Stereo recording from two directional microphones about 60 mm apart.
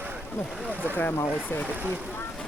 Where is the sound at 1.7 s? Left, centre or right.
Right.